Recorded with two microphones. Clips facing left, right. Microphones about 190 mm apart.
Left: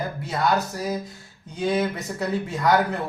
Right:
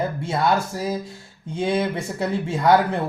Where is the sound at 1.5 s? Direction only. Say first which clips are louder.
Right 1 dB; 25° right (ahead or behind).